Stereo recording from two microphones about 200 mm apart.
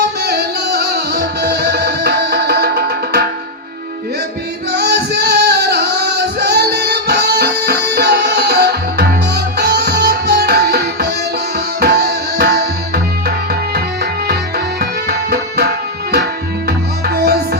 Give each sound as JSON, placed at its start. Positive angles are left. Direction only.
{"t": 0.0, "sound": "music", "side_deg": -55}
{"t": 4.7, "sound": "singing", "side_deg": -55}
{"t": 11.8, "sound": "tabla", "side_deg": -55}
{"t": 14.8, "sound": "music", "side_deg": -50}